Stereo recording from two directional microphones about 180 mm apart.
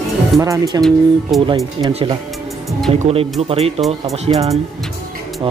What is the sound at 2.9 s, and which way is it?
Speech, 35° right (ahead or behind).